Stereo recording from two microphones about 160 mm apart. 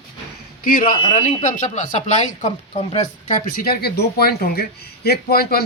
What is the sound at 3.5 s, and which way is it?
Speech, 70° left (ahead or behind).